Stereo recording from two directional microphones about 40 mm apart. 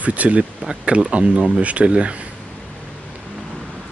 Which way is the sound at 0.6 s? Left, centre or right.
Right.